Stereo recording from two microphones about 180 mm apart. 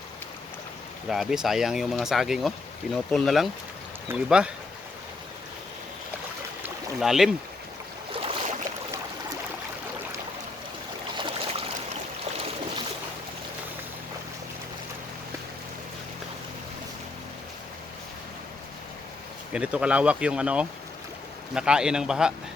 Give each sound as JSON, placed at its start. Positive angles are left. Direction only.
{"t": 1.1, "sound": "speech", "side_deg": 0}
{"t": 7.0, "sound": "speech", "side_deg": 0}
{"t": 8.1, "sound": "boat", "side_deg": -30}
{"t": 11.1, "sound": "boat", "side_deg": -25}
{"t": 19.5, "sound": "speech", "side_deg": -5}